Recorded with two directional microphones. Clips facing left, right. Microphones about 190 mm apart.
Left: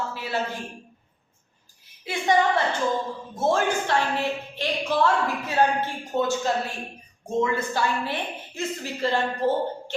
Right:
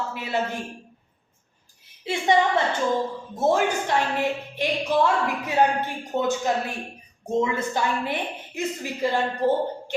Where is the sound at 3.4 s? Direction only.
15° right (ahead or behind).